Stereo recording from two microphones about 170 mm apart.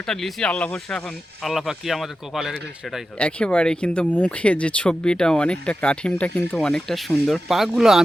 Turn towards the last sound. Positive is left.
turn(degrees=0)  # may be behind; listen again after turning